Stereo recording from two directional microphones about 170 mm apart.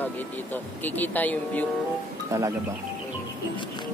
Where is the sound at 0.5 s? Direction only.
10° left (ahead or behind).